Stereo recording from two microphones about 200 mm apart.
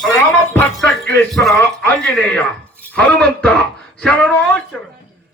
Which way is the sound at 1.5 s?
10° left (ahead or behind).